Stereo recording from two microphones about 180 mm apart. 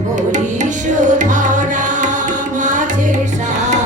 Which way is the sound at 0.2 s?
45° right (ahead or behind).